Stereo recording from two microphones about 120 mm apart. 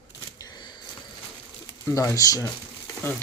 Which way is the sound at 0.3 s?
40° left (ahead or behind).